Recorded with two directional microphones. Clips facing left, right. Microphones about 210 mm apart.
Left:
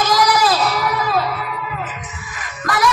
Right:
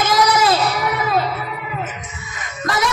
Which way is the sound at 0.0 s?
25° right (ahead or behind).